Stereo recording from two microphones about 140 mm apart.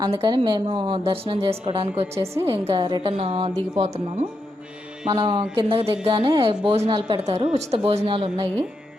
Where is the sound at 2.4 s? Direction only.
30° right (ahead or behind).